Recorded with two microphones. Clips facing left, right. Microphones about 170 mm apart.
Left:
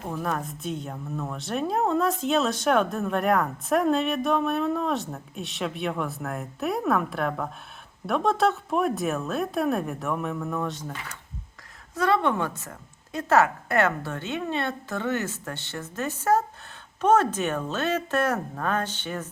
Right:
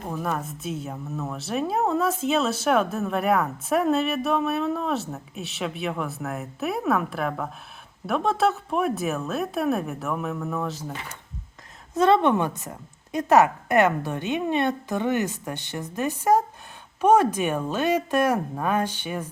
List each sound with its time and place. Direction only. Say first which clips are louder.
0.0 s speech: right 1 dB; centre (ahead or behind)
11.9 s a woman's voice: right 4 dB; 25° right (ahead or behind)